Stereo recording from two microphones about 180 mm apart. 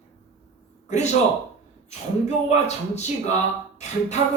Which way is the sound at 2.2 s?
40° left (ahead or behind).